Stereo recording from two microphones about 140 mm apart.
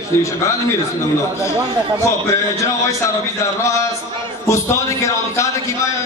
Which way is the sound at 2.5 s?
20° left (ahead or behind).